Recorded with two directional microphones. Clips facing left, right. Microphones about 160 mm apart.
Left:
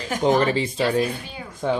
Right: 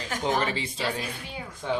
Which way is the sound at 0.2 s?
40° left (ahead or behind).